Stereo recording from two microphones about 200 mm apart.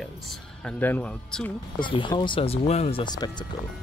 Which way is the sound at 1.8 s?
25° left (ahead or behind).